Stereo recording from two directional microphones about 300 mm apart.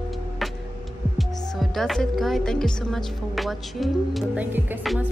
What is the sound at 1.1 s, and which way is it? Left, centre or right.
Speech, centre.